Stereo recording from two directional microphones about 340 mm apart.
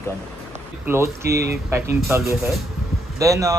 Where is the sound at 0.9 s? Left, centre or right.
Centre.